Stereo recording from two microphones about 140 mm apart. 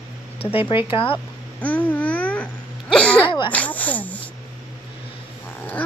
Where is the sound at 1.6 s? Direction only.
10° left (ahead or behind).